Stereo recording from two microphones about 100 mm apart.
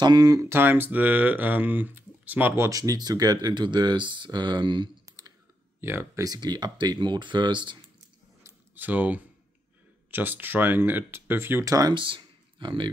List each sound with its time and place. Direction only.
0.0 s speech: 45° right (ahead or behind)
0.5 s speech: 20° right (ahead or behind); by 4.8 s 50° right (ahead or behind)
5.1 s clicking: 30° right (ahead or behind)
5.8 s speech: 25° right (ahead or behind)
6.2 s speech: 45° right (ahead or behind)
8.5 s a sound: 20° right (ahead or behind)
10.1 s speech: 20° right (ahead or behind)
11.6 s speech: 35° right (ahead or behind)
11.9 s speech: 55° right (ahead or behind)